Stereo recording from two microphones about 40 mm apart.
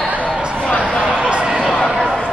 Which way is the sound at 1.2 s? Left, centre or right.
Right.